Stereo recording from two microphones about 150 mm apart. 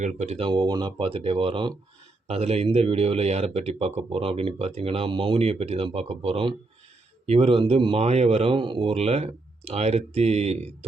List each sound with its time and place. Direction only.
0.0 s a man's voice: 45° right (ahead or behind)